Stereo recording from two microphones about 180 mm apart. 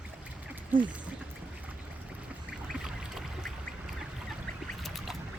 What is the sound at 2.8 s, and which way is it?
Boat, centre (ahead or behind).